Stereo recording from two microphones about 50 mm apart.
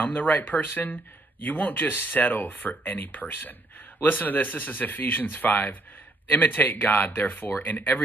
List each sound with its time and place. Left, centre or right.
0.0 s speech: left